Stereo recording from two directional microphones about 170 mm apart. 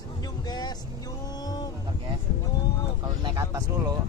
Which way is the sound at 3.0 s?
20° right (ahead or behind).